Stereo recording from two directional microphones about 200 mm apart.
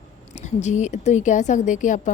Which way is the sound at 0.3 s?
35° left (ahead or behind).